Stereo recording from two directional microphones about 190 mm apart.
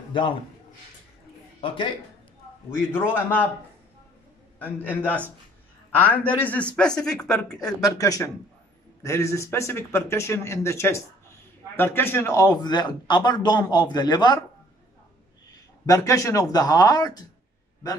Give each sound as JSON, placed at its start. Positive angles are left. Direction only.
{"t": 1.6, "sound": "a man's voice", "side_deg": 25}
{"t": 2.9, "sound": "speech", "side_deg": 10}
{"t": 4.8, "sound": "a man's voice", "side_deg": 10}
{"t": 7.8, "sound": "a man's voice", "side_deg": 20}
{"t": 15.8, "sound": "a man's voice", "side_deg": 15}